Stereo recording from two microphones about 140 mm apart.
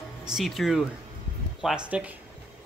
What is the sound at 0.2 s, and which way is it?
Speech, 5° right (ahead or behind).